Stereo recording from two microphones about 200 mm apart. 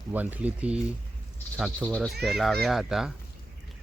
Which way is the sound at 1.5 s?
5° left (ahead or behind).